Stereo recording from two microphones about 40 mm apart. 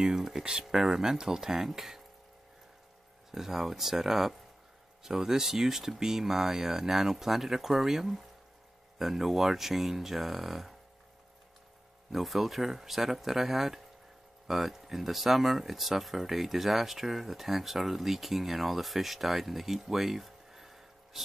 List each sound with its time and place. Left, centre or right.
0.0 s speech: centre
3.3 s speech: centre
12.1 s speech: centre